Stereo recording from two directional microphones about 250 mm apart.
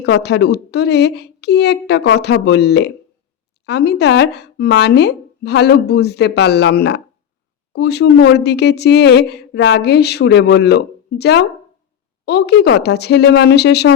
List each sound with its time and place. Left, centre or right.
0.0 s a woman's voice: left